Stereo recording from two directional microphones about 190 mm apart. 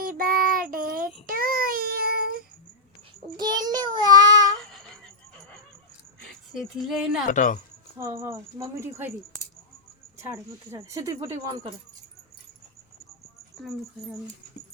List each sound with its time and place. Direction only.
0.0 s child singing: 50° right (ahead or behind)
3.3 s child singing: 20° right (ahead or behind)
6.7 s speech: 5° right (ahead or behind)
7.3 s speech: 40° left (ahead or behind)
8.2 s speech: 15° right (ahead or behind)
10.3 s speech: 15° right (ahead or behind)